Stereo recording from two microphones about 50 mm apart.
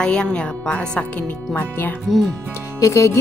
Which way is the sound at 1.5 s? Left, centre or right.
Left.